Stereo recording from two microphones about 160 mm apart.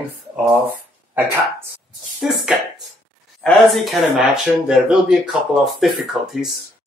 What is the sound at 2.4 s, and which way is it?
Speech, centre (ahead or behind).